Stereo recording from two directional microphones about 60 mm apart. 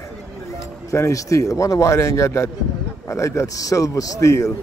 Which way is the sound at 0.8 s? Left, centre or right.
Left.